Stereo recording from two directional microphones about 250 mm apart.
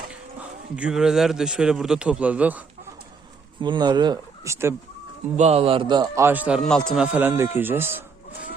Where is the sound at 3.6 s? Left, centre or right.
Centre.